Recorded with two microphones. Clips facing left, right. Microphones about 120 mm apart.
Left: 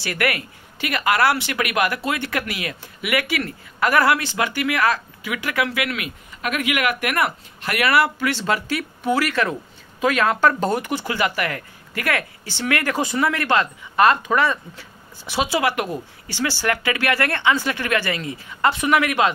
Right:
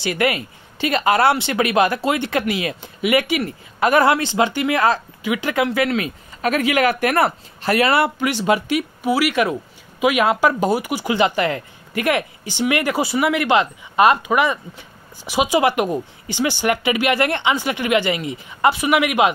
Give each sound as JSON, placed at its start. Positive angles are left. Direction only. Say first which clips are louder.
{"t": 0.0, "sound": "speech", "louder": "right 4 dB", "side_deg": -20}
{"t": 11.1, "sound": "speech", "louder": "right 8 dB", "side_deg": -25}